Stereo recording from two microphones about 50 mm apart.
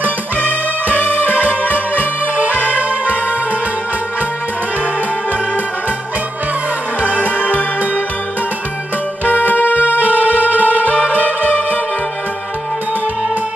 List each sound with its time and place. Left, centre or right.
0.9 s music: left
7.3 s music: left
9.2 s music: left
9.9 s music: right